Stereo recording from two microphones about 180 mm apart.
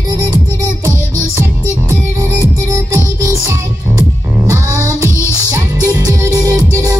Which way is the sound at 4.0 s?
15° right (ahead or behind).